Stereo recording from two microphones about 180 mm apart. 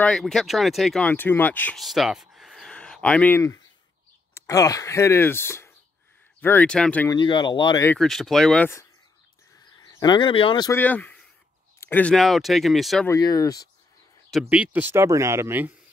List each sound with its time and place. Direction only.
0.0 s speech: 5° left (ahead or behind)
7.1 s speech: 25° left (ahead or behind)
7.8 s speech: 5° left (ahead or behind)
9.8 s speech: 20° left (ahead or behind)
10.7 s speech: 10° left (ahead or behind)
13.0 s speech: 20° left (ahead or behind)
14.5 s speech: 10° right (ahead or behind)